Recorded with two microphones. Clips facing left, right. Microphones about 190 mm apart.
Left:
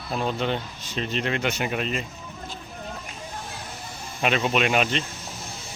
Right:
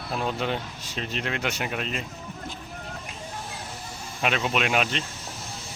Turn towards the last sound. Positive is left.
turn(degrees=0)  # may be behind; listen again after turning